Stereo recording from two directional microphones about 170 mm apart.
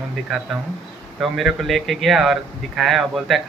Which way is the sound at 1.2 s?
Centre (ahead or behind).